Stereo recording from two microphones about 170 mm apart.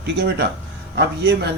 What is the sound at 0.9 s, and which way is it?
Speech, 90° right.